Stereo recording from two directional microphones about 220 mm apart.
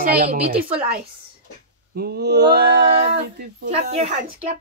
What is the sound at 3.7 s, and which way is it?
Speech, 30° right (ahead or behind).